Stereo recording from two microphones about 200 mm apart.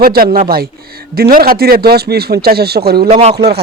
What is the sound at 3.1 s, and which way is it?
Speech, 30° right (ahead or behind).